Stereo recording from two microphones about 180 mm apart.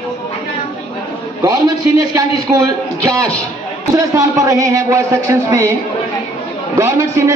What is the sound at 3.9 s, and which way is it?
A man's voice, 20° right (ahead or behind).